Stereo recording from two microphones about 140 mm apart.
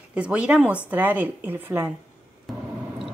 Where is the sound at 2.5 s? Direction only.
Centre (ahead or behind).